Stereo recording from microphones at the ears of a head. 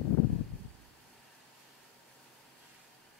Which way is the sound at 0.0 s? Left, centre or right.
Left.